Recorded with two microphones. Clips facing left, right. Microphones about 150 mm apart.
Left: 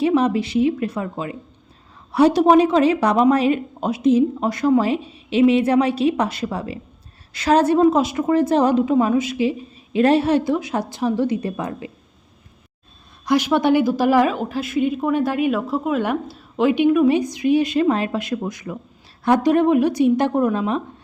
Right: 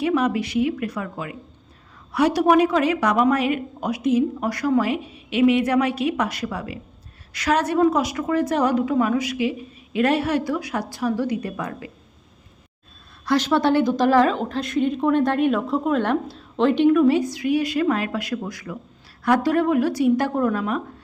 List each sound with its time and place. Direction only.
0.0 s a woman's voice: 30° left (ahead or behind)
13.2 s a woman's voice: 15° left (ahead or behind)